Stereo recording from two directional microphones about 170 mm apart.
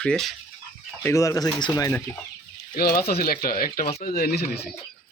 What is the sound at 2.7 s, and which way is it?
Speech, 60° left (ahead or behind).